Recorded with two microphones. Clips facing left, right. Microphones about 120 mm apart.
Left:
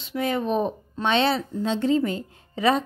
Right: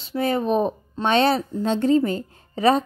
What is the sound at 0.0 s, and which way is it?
Speech, 35° right (ahead or behind).